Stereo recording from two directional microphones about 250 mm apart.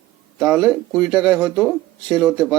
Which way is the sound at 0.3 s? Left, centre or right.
Centre.